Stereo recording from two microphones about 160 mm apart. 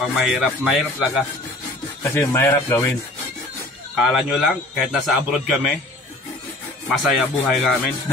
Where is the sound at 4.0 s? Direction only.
Centre (ahead or behind).